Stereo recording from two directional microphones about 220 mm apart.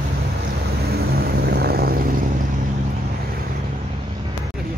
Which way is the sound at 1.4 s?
45° right (ahead or behind).